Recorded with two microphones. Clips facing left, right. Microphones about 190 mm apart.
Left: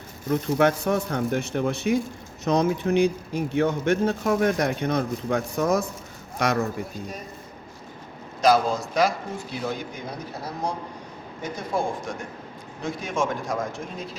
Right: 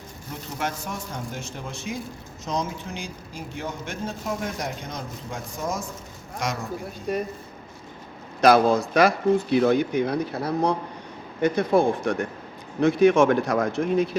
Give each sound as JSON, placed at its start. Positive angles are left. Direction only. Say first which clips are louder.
{"t": 0.3, "sound": "speech", "louder": "left 11 dB", "side_deg": 60}
{"t": 7.1, "sound": "speech", "louder": "right 11 dB", "side_deg": -60}
{"t": 8.4, "sound": "speech", "louder": "right 3 dB", "side_deg": -65}